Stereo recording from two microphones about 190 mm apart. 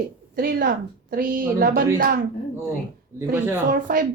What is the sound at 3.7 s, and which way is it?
Speech, 45° right (ahead or behind).